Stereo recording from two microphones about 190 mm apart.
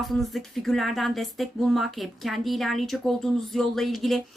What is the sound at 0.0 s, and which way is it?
Speech, centre (ahead or behind).